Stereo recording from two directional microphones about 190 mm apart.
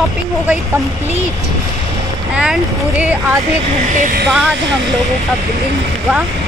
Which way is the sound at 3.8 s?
45° right (ahead or behind).